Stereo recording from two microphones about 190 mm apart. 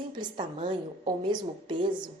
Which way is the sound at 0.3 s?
25° right (ahead or behind).